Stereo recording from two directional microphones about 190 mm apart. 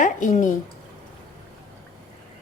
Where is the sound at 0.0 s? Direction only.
40° left (ahead or behind).